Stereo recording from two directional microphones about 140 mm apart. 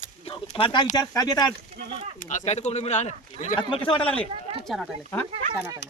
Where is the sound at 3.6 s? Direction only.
40° left (ahead or behind).